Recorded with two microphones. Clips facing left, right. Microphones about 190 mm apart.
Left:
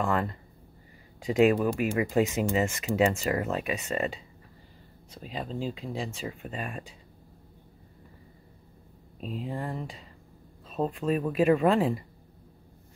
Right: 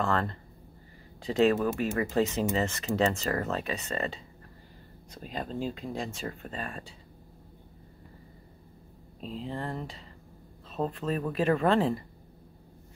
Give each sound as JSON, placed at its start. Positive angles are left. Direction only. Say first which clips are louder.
{"t": 0.0, "sound": "speech", "louder": "left 1 dB", "side_deg": 10}
{"t": 5.1, "sound": "speech", "louder": "even", "side_deg": 5}
{"t": 9.2, "sound": "speech", "louder": "left 1 dB", "side_deg": 15}